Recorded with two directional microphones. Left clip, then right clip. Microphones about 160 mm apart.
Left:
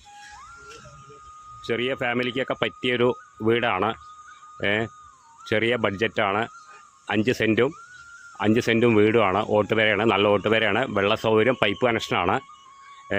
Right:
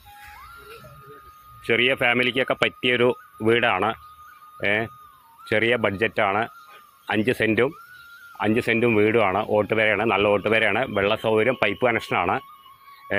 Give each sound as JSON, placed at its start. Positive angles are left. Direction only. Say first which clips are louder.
{"t": 1.6, "sound": "speech", "louder": "right 6 dB", "side_deg": 5}